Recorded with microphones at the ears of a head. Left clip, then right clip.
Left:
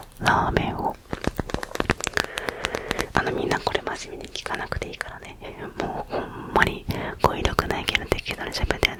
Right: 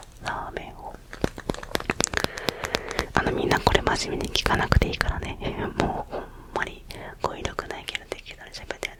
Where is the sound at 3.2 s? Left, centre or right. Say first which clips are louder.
Even; centre.